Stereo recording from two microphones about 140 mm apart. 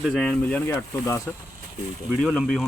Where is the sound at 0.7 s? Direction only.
20° left (ahead or behind).